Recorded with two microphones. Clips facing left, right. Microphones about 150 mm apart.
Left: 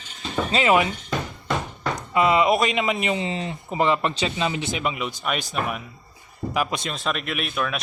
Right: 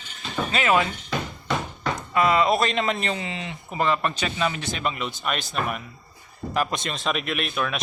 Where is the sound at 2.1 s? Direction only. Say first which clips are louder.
Left 2 dB; 20° left (ahead or behind).